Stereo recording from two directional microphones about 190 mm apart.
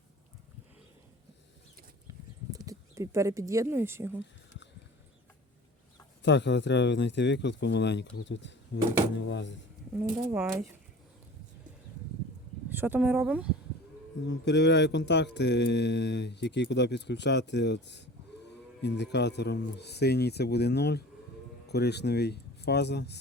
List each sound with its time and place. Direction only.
2.0 s horse: 20° right (ahead or behind)
6.2 s speech: 65° left (ahead or behind)
10.3 s speech: 15° right (ahead or behind)
12.7 s speech: 10° right (ahead or behind)
14.3 s speech: 65° left (ahead or behind)